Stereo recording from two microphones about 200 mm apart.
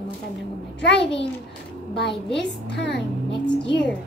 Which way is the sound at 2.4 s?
60° left (ahead or behind).